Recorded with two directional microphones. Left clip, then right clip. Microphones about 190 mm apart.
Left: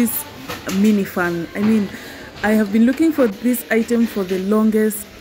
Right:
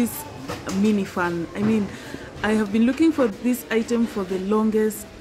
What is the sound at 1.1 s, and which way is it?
Speech, 15° left (ahead or behind).